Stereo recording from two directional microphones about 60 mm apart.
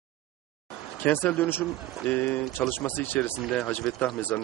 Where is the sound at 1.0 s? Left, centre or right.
Left.